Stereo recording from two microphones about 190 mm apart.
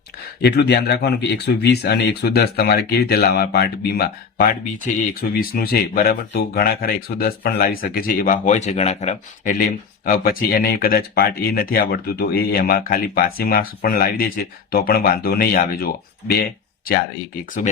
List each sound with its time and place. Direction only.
0.4 s speech: 60° left (ahead or behind)